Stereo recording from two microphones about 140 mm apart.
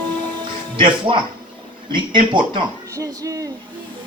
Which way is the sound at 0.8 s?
35° right (ahead or behind).